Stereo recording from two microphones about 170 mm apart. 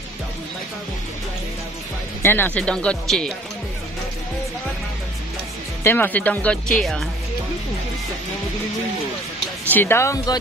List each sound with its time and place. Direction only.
2.2 s speech: 10° left (ahead or behind)
5.9 s speech: 10° left (ahead or behind)
9.7 s speech: 10° left (ahead or behind)